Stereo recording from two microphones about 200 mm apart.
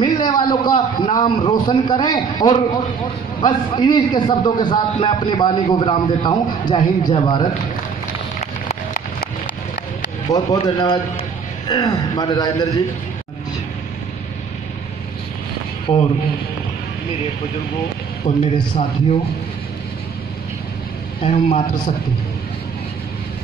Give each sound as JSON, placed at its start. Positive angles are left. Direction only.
{"t": 0.0, "sound": "a man's voice", "side_deg": 20}
{"t": 10.3, "sound": "a man's voice", "side_deg": 20}
{"t": 18.3, "sound": "a man's voice", "side_deg": 25}
{"t": 21.2, "sound": "a man's voice", "side_deg": 35}